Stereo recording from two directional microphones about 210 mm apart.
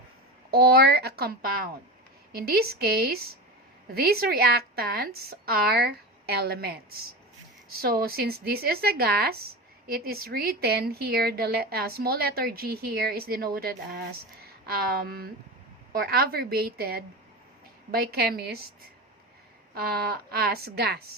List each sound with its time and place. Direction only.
0.5 s speech: 45° right (ahead or behind)
19.7 s speech: 50° right (ahead or behind)